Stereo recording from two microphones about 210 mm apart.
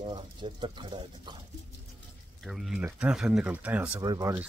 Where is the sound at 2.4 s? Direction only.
Centre (ahead or behind).